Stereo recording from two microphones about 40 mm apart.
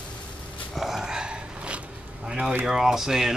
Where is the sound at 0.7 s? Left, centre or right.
Centre.